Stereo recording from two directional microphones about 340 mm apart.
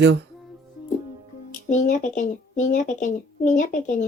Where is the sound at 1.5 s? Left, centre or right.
Left.